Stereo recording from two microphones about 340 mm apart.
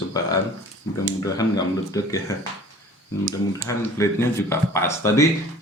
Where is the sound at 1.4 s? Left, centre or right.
Centre.